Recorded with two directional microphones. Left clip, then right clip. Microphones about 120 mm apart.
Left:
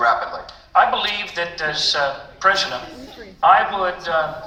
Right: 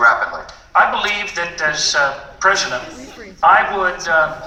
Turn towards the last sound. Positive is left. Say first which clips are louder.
# right 5 dB
turn(degrees=20)  # may be behind; listen again after turning